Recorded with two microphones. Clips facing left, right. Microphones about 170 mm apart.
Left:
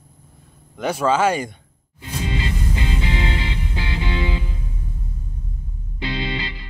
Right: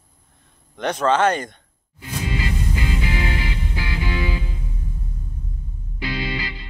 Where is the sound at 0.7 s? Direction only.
5° left (ahead or behind).